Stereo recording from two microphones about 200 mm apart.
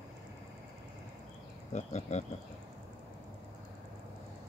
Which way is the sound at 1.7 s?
35° left (ahead or behind).